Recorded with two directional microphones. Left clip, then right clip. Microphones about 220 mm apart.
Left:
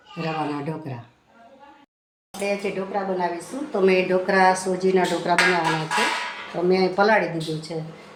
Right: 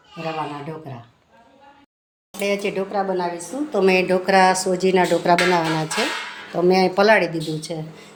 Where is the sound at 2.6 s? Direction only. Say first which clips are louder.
Right 3 dB; 50° right (ahead or behind).